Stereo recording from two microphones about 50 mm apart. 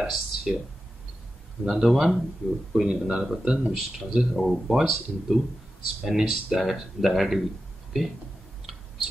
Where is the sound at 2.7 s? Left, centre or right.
Centre.